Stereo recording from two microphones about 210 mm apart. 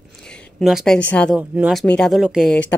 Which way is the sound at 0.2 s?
5° left (ahead or behind).